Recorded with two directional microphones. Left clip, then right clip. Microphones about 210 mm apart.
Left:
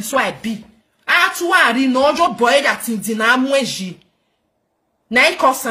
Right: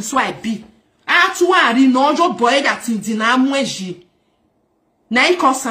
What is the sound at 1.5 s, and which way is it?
Speech, 45° left (ahead or behind).